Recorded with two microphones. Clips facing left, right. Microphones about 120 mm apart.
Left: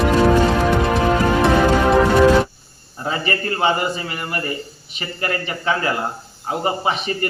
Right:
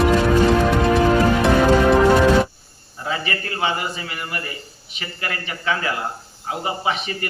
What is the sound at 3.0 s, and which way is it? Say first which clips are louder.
A man's voice: left 3 dB; 35° left (ahead or behind).